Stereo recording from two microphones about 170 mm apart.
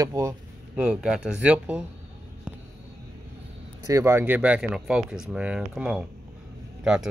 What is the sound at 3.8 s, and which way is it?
Speech, 15° right (ahead or behind).